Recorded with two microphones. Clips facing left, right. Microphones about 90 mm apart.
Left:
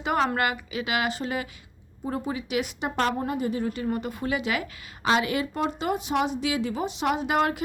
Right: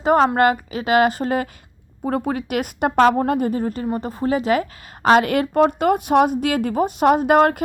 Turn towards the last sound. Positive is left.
turn(degrees=-50)  # may be behind; listen again after turning